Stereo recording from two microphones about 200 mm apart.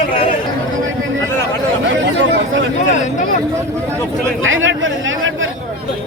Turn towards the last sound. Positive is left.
turn(degrees=-75)  # may be behind; listen again after turning